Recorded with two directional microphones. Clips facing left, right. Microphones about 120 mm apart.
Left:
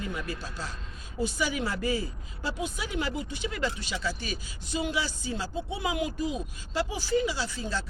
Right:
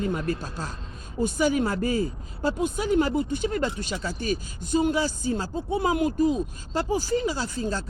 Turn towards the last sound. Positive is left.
turn(degrees=-45)  # may be behind; listen again after turning